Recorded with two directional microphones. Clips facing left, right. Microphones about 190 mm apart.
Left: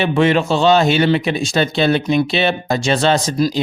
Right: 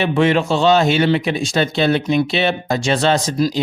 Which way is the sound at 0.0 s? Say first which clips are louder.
Left 1 dB; 25° left (ahead or behind).